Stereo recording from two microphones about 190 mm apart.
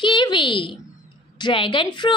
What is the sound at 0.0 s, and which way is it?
A woman's voice, 25° left (ahead or behind).